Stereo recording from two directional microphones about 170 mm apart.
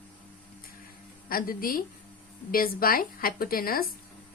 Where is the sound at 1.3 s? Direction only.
60° left (ahead or behind).